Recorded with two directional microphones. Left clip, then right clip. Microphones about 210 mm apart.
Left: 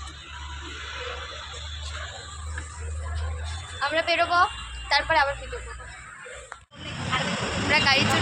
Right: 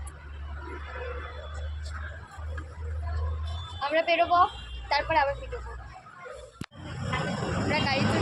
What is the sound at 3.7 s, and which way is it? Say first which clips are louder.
Speech: left 1 dB; centre (ahead or behind).